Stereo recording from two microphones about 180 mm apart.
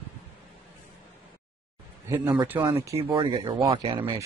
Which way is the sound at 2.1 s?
20° right (ahead or behind).